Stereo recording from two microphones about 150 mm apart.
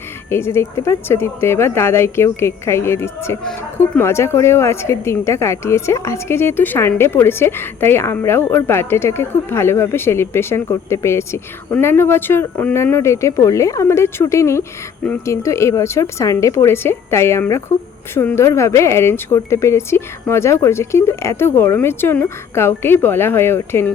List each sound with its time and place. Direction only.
0.3 s a woman's voice: 15° left (ahead or behind)